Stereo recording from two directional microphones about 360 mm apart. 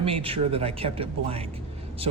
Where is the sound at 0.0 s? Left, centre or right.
Centre.